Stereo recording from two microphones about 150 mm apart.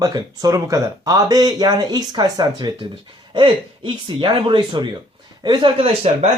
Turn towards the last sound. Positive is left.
turn(degrees=-45)  # may be behind; listen again after turning